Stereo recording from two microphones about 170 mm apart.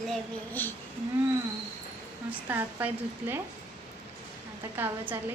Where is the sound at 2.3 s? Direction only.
10° right (ahead or behind).